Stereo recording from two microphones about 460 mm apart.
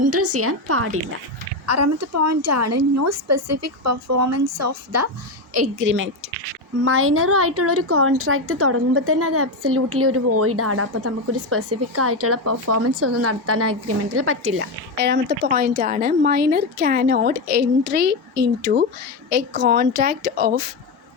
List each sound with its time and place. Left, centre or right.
0.0 s a woman's voice: right